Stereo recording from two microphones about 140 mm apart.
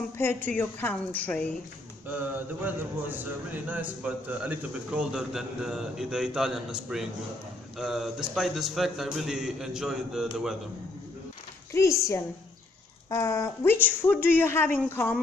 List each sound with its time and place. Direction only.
0.2 s a woman's voice: 15° left (ahead or behind)
2.6 s a man's voice: 10° right (ahead or behind)
11.7 s a woman's voice: 20° left (ahead or behind)